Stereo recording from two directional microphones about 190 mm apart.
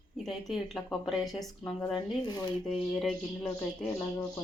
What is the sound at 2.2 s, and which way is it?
Speech, 20° left (ahead or behind).